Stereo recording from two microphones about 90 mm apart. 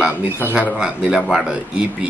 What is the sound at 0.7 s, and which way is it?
Speech, 5° right (ahead or behind).